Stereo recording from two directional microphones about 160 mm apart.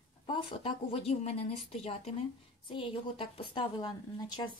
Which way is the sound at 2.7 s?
30° left (ahead or behind).